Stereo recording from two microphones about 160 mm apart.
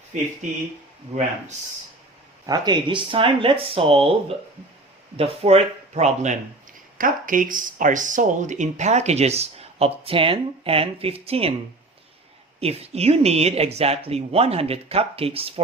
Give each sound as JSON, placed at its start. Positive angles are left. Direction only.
{"t": 2.5, "sound": "speech", "side_deg": -30}
{"t": 7.0, "sound": "speech", "side_deg": -60}
{"t": 12.5, "sound": "speech", "side_deg": -40}